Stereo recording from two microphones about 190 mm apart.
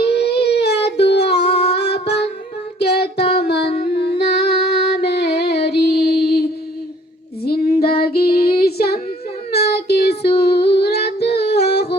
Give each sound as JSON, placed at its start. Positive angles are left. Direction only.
{"t": 0.0, "sound": "a sound", "side_deg": 60}
{"t": 2.7, "sound": "child singing", "side_deg": 60}
{"t": 3.3, "sound": "music", "side_deg": 60}
{"t": 3.9, "sound": "female singing", "side_deg": 60}
{"t": 7.4, "sound": "female singing", "side_deg": 55}
{"t": 9.5, "sound": "child singing", "side_deg": 60}
{"t": 10.4, "sound": "a sound", "side_deg": 60}